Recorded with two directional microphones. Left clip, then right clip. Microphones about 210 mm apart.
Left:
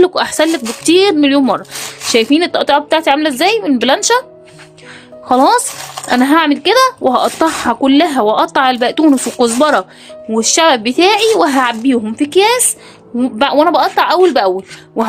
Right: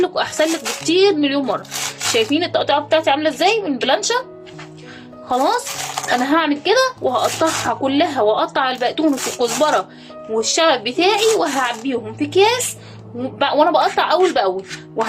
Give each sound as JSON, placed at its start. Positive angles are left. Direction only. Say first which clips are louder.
{"t": 0.0, "sound": "speech", "louder": "left 6 dB", "side_deg": 60}
{"t": 5.3, "sound": "speech", "louder": "left 8 dB", "side_deg": 60}